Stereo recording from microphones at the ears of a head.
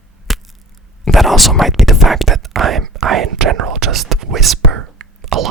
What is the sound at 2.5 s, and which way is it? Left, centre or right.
Whispering, right.